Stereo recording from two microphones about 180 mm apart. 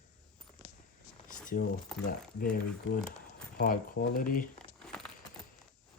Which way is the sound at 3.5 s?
55° left (ahead or behind).